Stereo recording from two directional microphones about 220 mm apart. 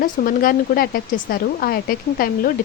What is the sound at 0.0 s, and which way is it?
Speech, 40° left (ahead or behind).